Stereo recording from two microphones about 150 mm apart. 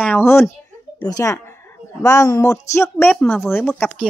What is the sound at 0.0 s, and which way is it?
A child's voice, 15° left (ahead or behind).